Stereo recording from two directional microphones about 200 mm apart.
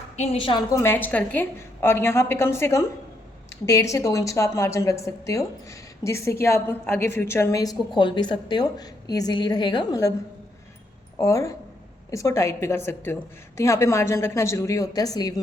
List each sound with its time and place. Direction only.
0.2 s a woman's voice: 30° left (ahead or behind)
0.8 s a woman's voice: 10° left (ahead or behind)
11.2 s a woman's voice: 15° left (ahead or behind)